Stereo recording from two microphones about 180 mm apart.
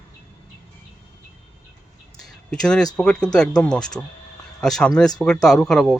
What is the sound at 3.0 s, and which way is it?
Speech, 5° left (ahead or behind).